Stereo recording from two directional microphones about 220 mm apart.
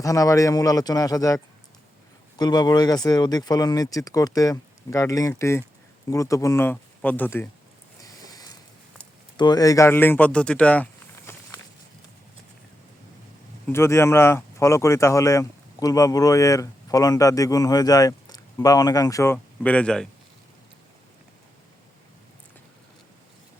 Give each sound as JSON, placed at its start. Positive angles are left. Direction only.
{"t": 0.0, "sound": "speech", "side_deg": 15}
{"t": 2.4, "sound": "speech", "side_deg": 20}
{"t": 8.0, "sound": "a sound", "side_deg": 15}
{"t": 9.4, "sound": "speech", "side_deg": 15}
{"t": 11.3, "sound": "walk", "side_deg": 10}
{"t": 13.7, "sound": "speech", "side_deg": 10}